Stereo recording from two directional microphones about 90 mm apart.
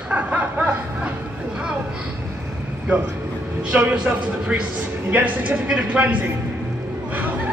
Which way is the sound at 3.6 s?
10° right (ahead or behind).